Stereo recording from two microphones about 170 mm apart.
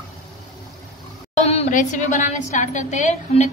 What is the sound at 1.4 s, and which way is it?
A woman's voice, 40° left (ahead or behind).